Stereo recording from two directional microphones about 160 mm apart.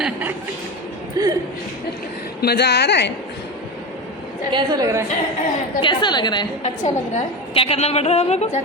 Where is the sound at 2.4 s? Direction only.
85° left.